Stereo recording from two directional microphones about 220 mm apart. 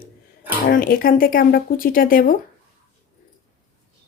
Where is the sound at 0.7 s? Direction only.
40° left (ahead or behind).